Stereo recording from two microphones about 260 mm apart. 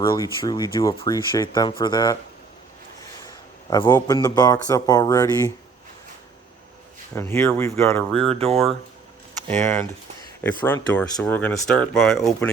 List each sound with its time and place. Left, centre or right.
0.0 s speech: centre
3.2 s a sound: centre
3.9 s speech: centre
7.2 s speech: centre
8.3 s speech: right
9.5 s speech: centre